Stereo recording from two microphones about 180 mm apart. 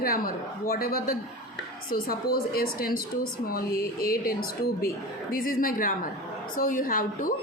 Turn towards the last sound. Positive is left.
turn(degrees=50)  # may be behind; listen again after turning